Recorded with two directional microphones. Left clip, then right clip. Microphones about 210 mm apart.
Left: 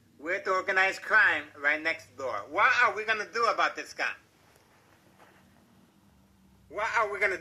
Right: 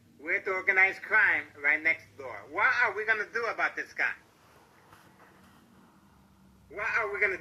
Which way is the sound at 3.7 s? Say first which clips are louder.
Right 1 dB; 50° left (ahead or behind).